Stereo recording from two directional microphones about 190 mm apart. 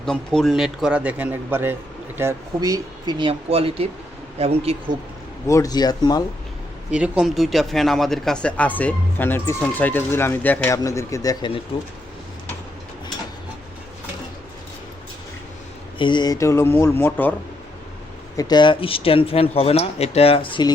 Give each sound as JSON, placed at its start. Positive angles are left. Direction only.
{"t": 0.0, "sound": "a man's voice", "side_deg": 5}
{"t": 5.5, "sound": "speech", "side_deg": 20}
{"t": 6.9, "sound": "speech", "side_deg": -5}
{"t": 16.0, "sound": "speech", "side_deg": 25}
{"t": 18.3, "sound": "speech", "side_deg": 20}